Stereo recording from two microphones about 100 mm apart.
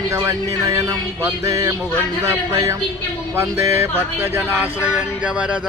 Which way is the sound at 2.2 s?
30° right (ahead or behind).